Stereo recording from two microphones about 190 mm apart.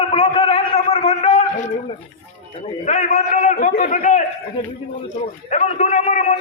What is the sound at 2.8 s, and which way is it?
A man's voice, 40° left (ahead or behind).